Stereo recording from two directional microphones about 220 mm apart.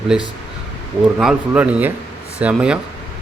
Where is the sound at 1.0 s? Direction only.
5° right (ahead or behind).